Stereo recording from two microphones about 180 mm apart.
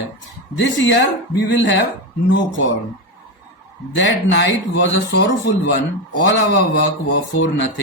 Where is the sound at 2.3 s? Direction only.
90° left.